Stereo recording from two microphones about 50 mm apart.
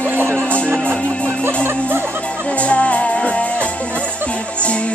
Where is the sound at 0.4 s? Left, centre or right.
Left.